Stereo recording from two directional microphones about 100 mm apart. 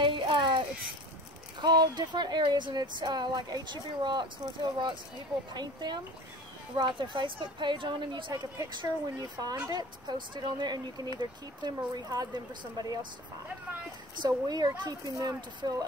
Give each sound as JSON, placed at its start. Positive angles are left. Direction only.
{"t": 0.0, "sound": "a sound", "side_deg": -55}
{"t": 1.6, "sound": "speech", "side_deg": -45}
{"t": 5.5, "sound": "speech", "side_deg": -45}
{"t": 8.7, "sound": "speech", "side_deg": -40}
{"t": 14.1, "sound": "speech", "side_deg": -45}